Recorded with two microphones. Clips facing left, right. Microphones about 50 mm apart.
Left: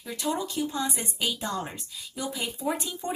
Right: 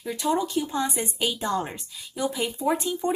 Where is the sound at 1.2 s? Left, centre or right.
Centre.